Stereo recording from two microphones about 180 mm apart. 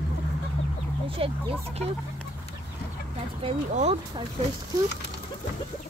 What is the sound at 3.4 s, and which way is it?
Speech, 35° right (ahead or behind).